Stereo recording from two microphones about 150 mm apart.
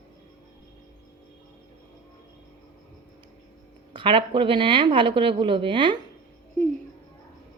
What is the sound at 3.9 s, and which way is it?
A woman's voice, 35° right (ahead or behind).